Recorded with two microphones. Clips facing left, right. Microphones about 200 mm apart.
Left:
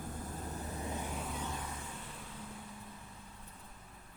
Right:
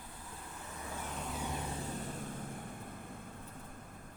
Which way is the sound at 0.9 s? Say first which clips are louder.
Left 2 dB; 15° left (ahead or behind).